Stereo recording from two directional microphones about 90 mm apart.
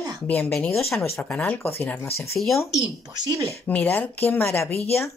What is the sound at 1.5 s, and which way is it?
Speech, 20° left (ahead or behind).